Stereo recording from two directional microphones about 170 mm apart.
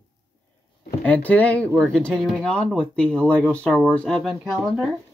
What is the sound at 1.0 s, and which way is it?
Speech, 10° left (ahead or behind).